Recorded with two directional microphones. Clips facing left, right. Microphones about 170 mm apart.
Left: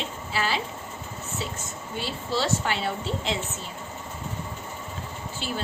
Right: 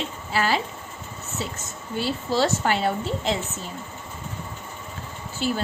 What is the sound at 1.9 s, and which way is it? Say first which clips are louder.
A woman's voice: right 5 dB; 45° right (ahead or behind).